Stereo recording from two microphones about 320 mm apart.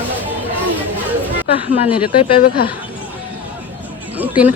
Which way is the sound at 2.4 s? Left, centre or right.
Left.